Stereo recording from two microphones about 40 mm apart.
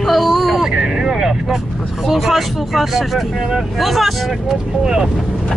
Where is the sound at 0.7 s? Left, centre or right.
Centre.